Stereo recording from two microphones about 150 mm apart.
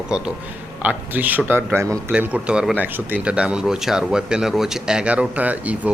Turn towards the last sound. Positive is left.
turn(degrees=-10)  # may be behind; listen again after turning